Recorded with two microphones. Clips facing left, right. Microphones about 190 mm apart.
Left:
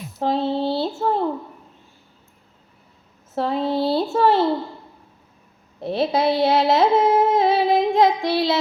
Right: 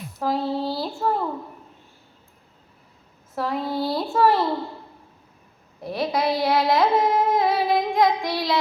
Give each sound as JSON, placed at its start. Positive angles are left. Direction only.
{"t": 0.2, "sound": "child singing", "side_deg": 25}
{"t": 3.3, "sound": "a woman's voice", "side_deg": 25}
{"t": 5.8, "sound": "singing", "side_deg": 25}